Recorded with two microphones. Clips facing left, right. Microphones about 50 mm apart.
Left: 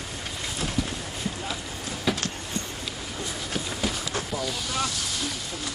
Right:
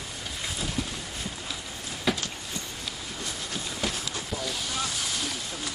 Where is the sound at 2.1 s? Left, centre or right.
Centre.